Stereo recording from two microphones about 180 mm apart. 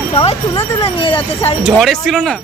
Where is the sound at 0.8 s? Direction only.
30° left (ahead or behind).